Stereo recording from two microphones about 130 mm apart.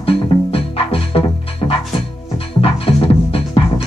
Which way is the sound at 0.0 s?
45° left (ahead or behind).